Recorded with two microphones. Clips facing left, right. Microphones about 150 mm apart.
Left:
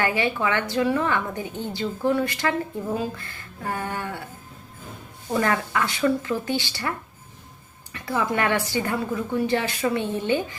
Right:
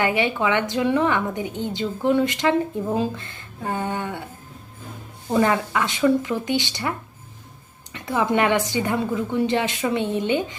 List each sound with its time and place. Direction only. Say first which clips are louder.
0.0 s a woman's voice: right 2 dB; 20° right (ahead or behind)
5.3 s speech: right 3 dB; 15° right (ahead or behind)
7.9 s a woman's voice: right 4 dB; 20° right (ahead or behind)